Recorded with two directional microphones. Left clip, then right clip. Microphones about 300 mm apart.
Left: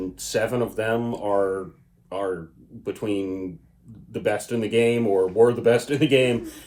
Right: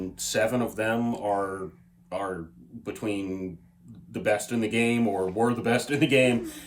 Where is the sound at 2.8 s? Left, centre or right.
Centre.